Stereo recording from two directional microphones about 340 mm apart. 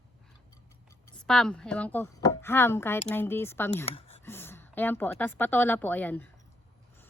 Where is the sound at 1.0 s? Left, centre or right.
Centre.